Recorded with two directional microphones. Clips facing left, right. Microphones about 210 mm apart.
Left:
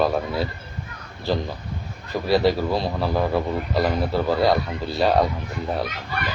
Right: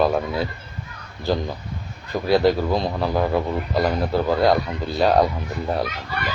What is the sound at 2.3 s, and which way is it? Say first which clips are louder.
Speech: right 2 dB; centre (ahead or behind).